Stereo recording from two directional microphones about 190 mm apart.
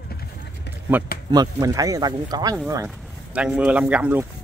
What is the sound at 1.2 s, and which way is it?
Speech, 20° right (ahead or behind).